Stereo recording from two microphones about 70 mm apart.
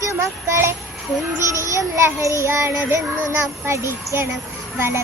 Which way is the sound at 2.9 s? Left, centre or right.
Right.